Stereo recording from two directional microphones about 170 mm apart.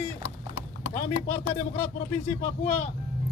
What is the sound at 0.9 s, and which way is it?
Speech, 40° left (ahead or behind).